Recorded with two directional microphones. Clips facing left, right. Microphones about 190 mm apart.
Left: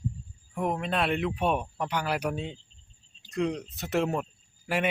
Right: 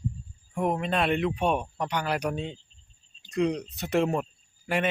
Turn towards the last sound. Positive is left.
turn(degrees=5)  # may be behind; listen again after turning